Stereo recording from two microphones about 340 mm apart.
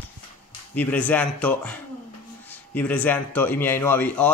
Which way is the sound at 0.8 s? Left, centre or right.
Centre.